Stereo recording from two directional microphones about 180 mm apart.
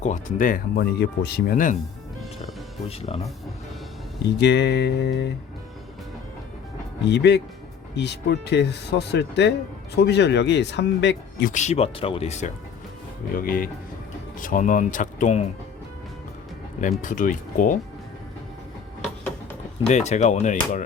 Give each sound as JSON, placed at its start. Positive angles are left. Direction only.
{"t": 0.0, "sound": "speech", "side_deg": 45}
{"t": 2.9, "sound": "speech", "side_deg": 35}
{"t": 4.4, "sound": "speech", "side_deg": 75}
{"t": 7.1, "sound": "speech", "side_deg": 70}
{"t": 11.5, "sound": "speech", "side_deg": 40}
{"t": 13.3, "sound": "speech", "side_deg": 55}
{"t": 17.0, "sound": "speech", "side_deg": 45}
{"t": 19.9, "sound": "speech", "side_deg": 40}